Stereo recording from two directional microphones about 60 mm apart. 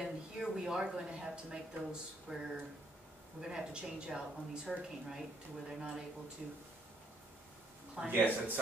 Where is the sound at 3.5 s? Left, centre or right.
Centre.